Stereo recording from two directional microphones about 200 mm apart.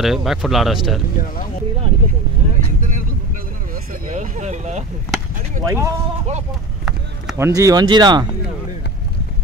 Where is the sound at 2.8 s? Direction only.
40° right (ahead or behind).